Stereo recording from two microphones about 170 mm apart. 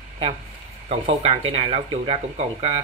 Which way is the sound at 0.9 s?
35° right (ahead or behind).